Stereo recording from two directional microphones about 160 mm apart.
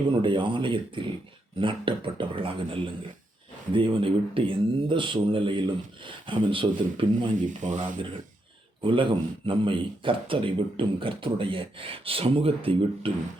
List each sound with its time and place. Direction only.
0.2 s a man's voice: 30° right (ahead or behind)
7.4 s speech: 50° right (ahead or behind)
8.8 s a man's voice: 30° right (ahead or behind)